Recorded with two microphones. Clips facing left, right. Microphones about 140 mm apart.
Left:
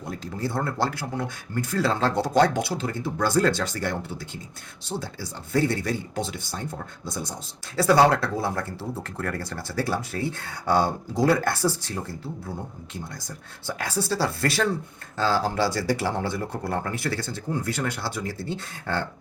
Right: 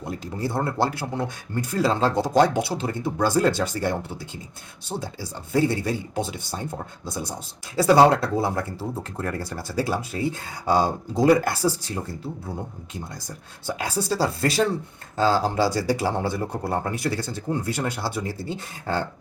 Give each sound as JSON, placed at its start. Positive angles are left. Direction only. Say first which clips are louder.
{"t": 0.0, "sound": "speech", "louder": "right 2 dB", "side_deg": -25}
{"t": 13.7, "sound": "speech", "louder": "right 2 dB", "side_deg": -20}